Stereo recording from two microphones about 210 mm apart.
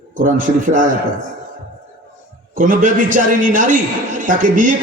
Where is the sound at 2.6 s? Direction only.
40° right (ahead or behind).